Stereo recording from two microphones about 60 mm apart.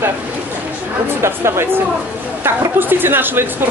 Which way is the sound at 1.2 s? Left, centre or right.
Right.